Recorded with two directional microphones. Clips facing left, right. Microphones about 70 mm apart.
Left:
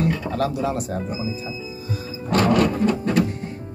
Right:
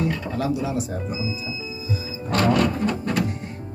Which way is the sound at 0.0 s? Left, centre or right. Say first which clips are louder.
Left 2 dB; left.